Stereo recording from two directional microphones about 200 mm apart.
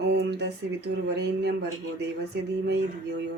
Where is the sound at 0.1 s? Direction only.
60° right (ahead or behind).